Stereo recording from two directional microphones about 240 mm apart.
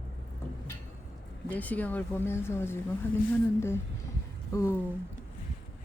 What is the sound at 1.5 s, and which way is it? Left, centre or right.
Speech, centre.